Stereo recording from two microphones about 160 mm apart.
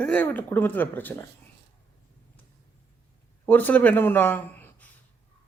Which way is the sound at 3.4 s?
10° left (ahead or behind).